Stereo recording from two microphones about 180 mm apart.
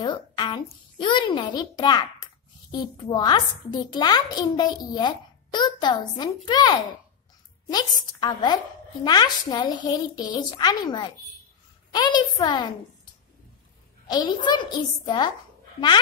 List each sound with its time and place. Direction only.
0.0 s a child's voice: 25° left (ahead or behind)
14.0 s a child's voice: 25° left (ahead or behind)